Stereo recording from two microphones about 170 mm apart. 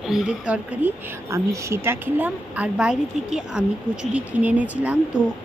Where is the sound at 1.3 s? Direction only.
15° right (ahead or behind).